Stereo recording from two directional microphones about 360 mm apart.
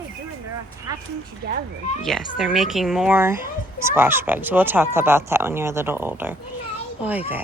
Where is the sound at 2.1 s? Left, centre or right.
Centre.